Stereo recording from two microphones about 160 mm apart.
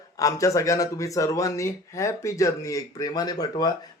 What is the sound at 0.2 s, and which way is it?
A man's voice, 20° left (ahead or behind).